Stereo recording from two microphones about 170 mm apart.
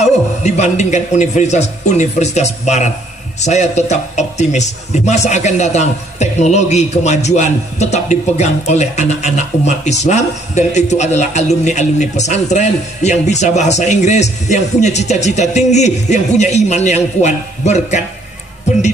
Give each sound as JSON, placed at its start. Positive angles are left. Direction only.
{"t": 0.0, "sound": "a man's voice", "side_deg": 40}